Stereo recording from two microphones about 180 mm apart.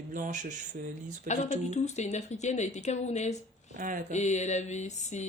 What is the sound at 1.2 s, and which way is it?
Mantra, 40° left (ahead or behind).